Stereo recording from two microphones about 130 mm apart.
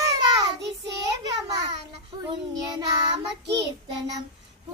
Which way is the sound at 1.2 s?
30° right (ahead or behind).